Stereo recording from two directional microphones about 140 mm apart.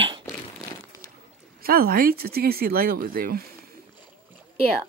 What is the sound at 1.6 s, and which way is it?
Speech, 90° right.